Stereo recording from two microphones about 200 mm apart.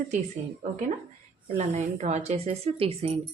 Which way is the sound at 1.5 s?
35° right (ahead or behind).